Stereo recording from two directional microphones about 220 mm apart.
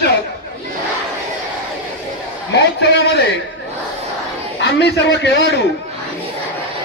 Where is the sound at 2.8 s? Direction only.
50° left (ahead or behind).